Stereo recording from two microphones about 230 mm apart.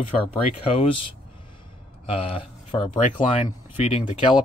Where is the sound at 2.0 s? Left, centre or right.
Left.